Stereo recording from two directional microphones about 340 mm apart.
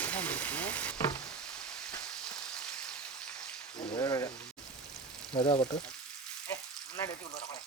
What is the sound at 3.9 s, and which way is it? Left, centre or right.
Frying, centre.